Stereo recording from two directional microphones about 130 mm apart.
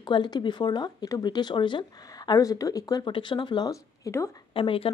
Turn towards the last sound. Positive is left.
turn(degrees=45)  # may be behind; listen again after turning